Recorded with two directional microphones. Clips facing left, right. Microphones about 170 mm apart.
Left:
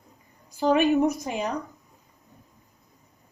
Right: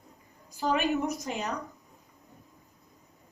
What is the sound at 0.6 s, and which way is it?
Speech, 55° left (ahead or behind).